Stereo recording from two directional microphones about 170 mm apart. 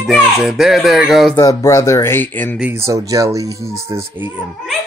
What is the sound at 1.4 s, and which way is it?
Speech, 20° left (ahead or behind).